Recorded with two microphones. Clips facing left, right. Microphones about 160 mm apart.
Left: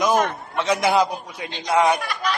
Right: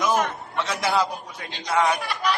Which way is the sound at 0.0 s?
15° left (ahead or behind).